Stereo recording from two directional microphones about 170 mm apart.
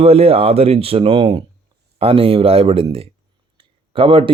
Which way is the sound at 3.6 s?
30° right (ahead or behind).